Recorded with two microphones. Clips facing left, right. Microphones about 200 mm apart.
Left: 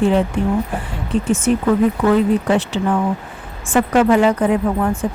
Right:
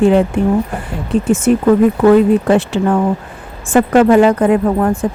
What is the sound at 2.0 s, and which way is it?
Speech, 50° right (ahead or behind).